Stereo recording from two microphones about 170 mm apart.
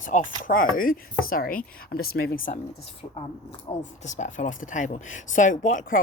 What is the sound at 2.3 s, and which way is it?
Speech, 50° left (ahead or behind).